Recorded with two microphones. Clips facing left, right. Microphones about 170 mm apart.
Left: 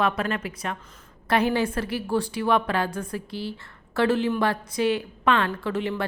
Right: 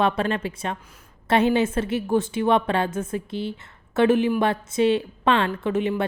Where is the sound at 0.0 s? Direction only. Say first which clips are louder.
Right 3 dB; 30° right (ahead or behind).